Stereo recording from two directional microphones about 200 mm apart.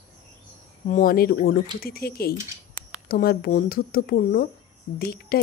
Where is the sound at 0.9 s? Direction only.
45° left (ahead or behind).